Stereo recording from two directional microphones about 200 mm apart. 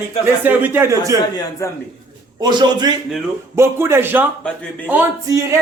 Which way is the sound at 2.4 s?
20° right (ahead or behind).